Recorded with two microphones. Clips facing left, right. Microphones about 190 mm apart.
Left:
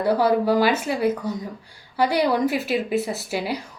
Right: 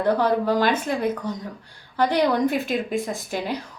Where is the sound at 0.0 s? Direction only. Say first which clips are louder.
Left 1 dB; 10° left (ahead or behind).